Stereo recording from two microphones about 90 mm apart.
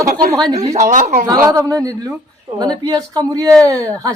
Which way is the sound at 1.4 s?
40° right (ahead or behind).